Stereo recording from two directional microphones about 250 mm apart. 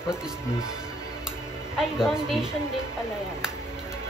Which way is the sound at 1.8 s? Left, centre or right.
Centre.